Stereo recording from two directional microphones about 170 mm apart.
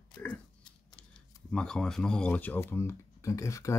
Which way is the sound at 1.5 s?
5° left (ahead or behind).